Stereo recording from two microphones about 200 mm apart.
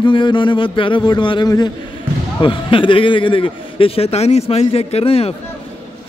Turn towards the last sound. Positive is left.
turn(degrees=30)  # may be behind; listen again after turning